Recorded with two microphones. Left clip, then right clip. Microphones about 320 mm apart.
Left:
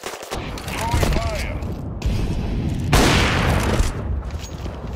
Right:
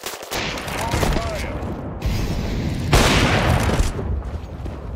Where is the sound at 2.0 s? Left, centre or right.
Centre.